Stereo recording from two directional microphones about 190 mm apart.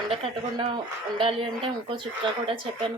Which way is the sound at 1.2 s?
30° right (ahead or behind).